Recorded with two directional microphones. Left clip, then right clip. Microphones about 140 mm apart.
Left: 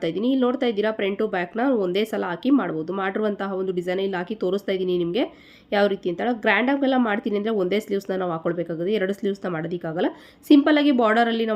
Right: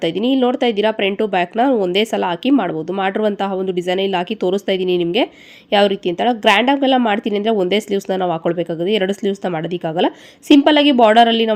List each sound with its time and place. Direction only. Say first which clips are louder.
0.0 s speech: right 6 dB; 25° right (ahead or behind)